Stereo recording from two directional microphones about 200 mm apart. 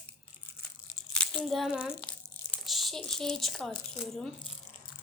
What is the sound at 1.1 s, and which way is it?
A child's voice, centre (ahead or behind).